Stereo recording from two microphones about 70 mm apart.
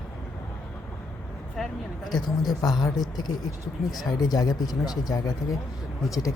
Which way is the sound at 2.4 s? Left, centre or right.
Left.